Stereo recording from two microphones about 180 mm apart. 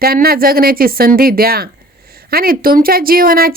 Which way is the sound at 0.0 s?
60° right (ahead or behind).